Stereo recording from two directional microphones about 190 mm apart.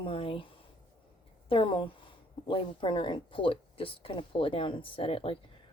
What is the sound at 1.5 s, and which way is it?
Speech, 25° left (ahead or behind).